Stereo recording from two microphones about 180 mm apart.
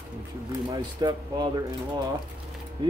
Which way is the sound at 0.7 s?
20° right (ahead or behind).